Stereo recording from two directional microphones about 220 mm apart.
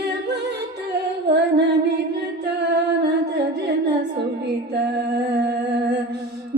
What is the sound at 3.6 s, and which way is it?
Humming, 50° right (ahead or behind).